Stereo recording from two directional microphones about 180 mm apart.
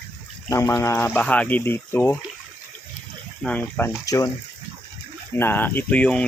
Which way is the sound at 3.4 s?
10° left (ahead or behind).